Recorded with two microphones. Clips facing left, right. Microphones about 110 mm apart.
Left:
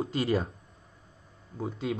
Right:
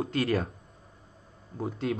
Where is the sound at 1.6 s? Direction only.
Centre (ahead or behind).